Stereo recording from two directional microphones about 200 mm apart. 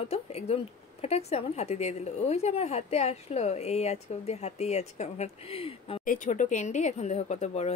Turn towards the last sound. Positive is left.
turn(degrees=35)  # may be behind; listen again after turning